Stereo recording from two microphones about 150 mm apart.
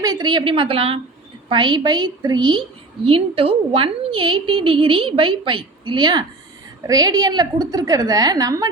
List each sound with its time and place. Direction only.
0.0 s a woman's voice: 25° right (ahead or behind)